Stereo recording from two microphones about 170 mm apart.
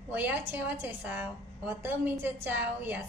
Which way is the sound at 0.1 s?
10° right (ahead or behind).